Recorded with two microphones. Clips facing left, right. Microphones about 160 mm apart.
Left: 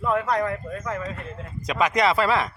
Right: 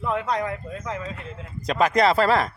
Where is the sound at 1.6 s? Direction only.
35° right (ahead or behind).